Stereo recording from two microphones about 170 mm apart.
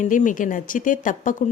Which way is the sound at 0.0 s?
50° left (ahead or behind).